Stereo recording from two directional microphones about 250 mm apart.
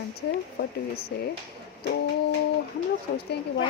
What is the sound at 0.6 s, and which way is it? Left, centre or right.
Speech, left.